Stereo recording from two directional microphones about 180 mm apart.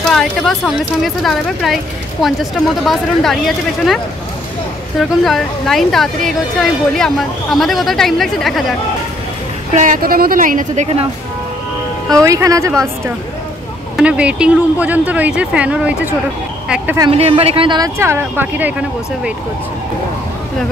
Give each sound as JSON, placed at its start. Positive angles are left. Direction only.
{"t": 0.0, "sound": "a woman's voice", "side_deg": 0}
{"t": 2.9, "sound": "a woman's voice", "side_deg": 0}
{"t": 9.8, "sound": "speech", "side_deg": -50}
{"t": 12.1, "sound": "speech", "side_deg": -15}
{"t": 13.9, "sound": "speech", "side_deg": -5}
{"t": 17.1, "sound": "speech", "side_deg": -35}